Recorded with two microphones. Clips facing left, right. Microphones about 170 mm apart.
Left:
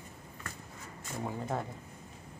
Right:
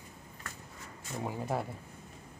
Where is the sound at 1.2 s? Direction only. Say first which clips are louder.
Right 1 dB; 10° right (ahead or behind).